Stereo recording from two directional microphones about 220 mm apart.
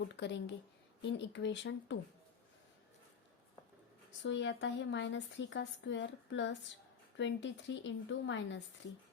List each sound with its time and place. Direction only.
0.2 s speech: 50° left (ahead or behind)
4.2 s speech: 55° left (ahead or behind)